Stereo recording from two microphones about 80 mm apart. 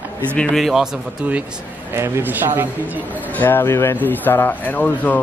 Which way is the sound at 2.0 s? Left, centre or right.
Right.